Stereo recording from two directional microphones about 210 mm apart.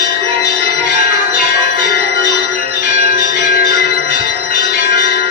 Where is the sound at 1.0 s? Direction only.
45° left (ahead or behind).